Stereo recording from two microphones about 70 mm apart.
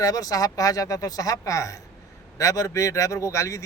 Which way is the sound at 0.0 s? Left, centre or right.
Left.